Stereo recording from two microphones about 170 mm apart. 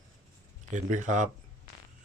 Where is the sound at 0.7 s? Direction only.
45° right (ahead or behind).